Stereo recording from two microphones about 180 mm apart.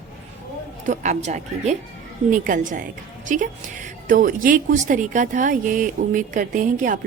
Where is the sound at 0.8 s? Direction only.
40° right (ahead or behind).